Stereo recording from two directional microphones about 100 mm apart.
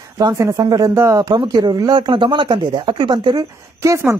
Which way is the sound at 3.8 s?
30° right (ahead or behind).